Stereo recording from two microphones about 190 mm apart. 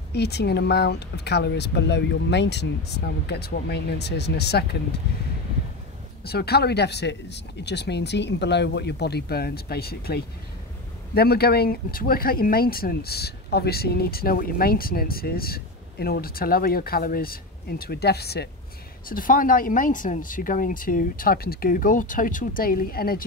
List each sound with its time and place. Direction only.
0.1 s speech: 60° left (ahead or behind)
6.2 s speech: 55° left (ahead or behind)
19.0 s speech: 45° left (ahead or behind)